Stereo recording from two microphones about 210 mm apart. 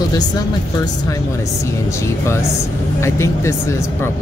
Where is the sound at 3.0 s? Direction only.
10° left (ahead or behind).